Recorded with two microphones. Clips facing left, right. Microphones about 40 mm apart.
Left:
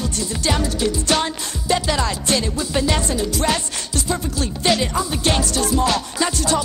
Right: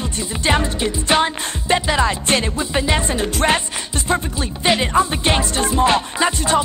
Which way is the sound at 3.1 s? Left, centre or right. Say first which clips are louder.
Right 3 dB; right.